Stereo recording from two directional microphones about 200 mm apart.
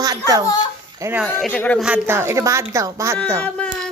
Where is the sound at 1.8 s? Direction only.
10° right (ahead or behind).